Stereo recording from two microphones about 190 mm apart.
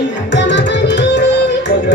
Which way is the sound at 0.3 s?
70° left (ahead or behind).